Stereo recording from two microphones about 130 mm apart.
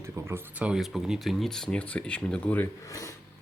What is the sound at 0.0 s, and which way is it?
Speech, 20° right (ahead or behind).